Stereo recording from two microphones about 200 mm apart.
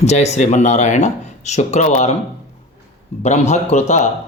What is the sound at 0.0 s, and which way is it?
Speech, 35° left (ahead or behind).